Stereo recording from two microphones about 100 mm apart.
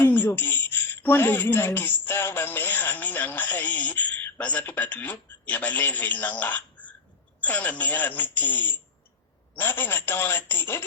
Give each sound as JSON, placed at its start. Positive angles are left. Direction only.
{"t": 0.0, "sound": "speech", "side_deg": 20}